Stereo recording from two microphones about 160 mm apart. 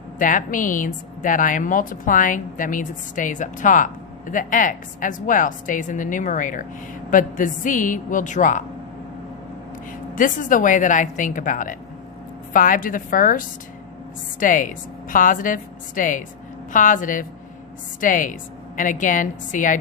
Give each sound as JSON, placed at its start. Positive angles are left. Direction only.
{"t": 0.2, "sound": "a woman's voice", "side_deg": 55}
{"t": 10.2, "sound": "a woman's voice", "side_deg": 55}